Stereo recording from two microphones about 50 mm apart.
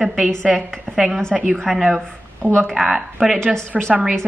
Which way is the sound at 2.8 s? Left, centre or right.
Centre.